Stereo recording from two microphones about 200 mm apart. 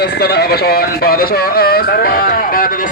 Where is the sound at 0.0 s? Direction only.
55° left (ahead or behind).